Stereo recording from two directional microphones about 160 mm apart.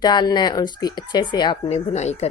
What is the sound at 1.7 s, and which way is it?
Speech, 45° left (ahead or behind).